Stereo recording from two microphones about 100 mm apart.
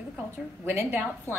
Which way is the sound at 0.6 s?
20° right (ahead or behind).